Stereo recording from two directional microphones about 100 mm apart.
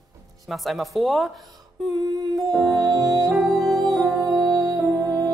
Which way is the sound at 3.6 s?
40° right (ahead or behind).